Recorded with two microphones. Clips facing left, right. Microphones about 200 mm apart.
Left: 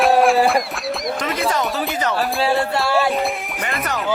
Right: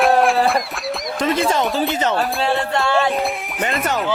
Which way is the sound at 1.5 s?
25° right (ahead or behind).